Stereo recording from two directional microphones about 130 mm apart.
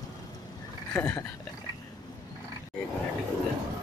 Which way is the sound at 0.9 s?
15° left (ahead or behind).